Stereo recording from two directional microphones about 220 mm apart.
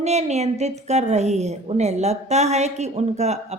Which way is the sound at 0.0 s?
30° right (ahead or behind).